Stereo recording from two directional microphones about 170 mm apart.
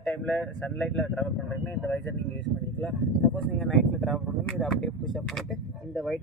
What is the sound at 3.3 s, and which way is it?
Speech, centre (ahead or behind).